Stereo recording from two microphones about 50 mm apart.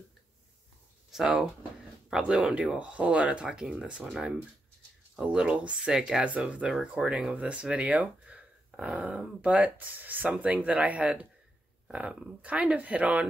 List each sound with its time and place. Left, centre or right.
2.3 s speech: right
6.2 s speech: right
7.2 s speech: right
10.3 s speech: right